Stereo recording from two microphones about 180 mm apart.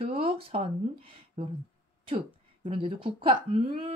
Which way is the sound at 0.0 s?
35° right (ahead or behind).